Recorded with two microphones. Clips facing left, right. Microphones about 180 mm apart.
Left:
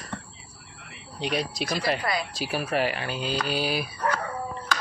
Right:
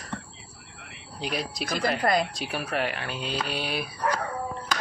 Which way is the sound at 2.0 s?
50° right (ahead or behind).